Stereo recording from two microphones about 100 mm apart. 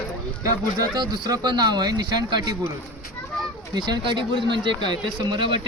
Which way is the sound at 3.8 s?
50° right (ahead or behind).